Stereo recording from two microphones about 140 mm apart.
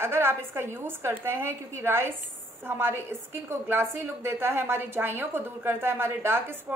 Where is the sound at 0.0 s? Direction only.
15° right (ahead or behind).